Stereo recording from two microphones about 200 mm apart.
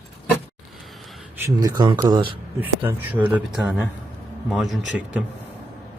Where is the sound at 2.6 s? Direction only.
10° right (ahead or behind).